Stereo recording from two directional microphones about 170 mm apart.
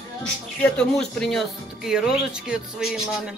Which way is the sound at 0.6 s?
5° left (ahead or behind).